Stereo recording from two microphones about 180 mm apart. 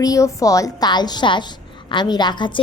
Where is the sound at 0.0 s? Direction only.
20° left (ahead or behind).